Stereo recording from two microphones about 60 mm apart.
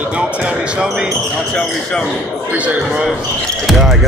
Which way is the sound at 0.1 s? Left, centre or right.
Right.